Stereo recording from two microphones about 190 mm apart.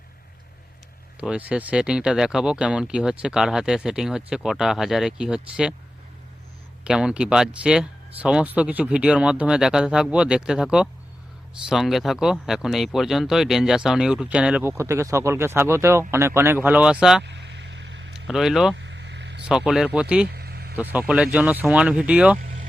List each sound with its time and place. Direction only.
1.2 s speech: 5° right (ahead or behind)
6.8 s speech: 5° right (ahead or behind)
17.2 s a sound: 65° right (ahead or behind)
18.3 s speech: centre (ahead or behind)
18.8 s vehicle: 65° right (ahead or behind)
19.5 s speech: 5° right (ahead or behind)
20.3 s vehicle: 55° right (ahead or behind)
21.3 s speech: 10° right (ahead or behind)